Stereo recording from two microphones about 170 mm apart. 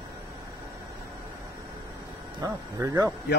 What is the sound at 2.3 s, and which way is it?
Speech, 20° right (ahead or behind).